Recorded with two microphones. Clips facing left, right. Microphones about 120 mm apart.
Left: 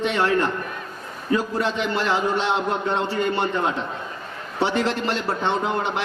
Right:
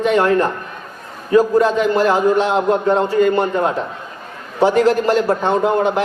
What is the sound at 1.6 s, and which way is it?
A man's voice, 45° right (ahead or behind).